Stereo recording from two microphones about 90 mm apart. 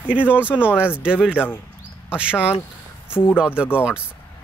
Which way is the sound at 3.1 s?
15° left (ahead or behind).